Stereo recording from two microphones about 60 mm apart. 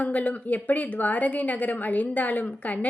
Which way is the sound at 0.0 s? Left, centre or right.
Left.